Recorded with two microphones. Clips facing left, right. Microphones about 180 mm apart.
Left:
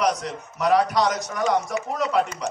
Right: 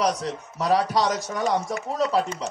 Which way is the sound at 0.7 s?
25° right (ahead or behind).